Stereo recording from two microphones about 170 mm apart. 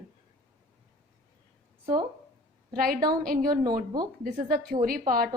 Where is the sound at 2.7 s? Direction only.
60° right (ahead or behind).